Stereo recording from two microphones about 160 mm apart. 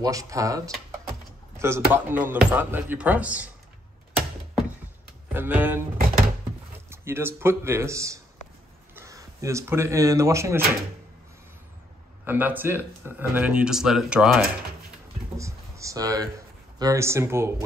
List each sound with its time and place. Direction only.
0.0 s speech: 20° right (ahead or behind)
5.3 s speech: 10° right (ahead or behind)
6.9 s speech: 15° right (ahead or behind)
12.3 s speech: 10° right (ahead or behind)
15.3 s a sound: 20° right (ahead or behind)